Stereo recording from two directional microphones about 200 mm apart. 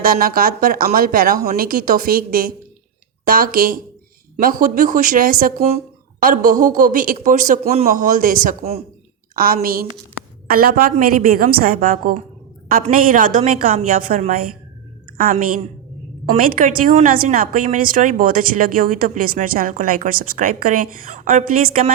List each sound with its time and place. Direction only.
0.0 s a woman's voice: 45° right (ahead or behind)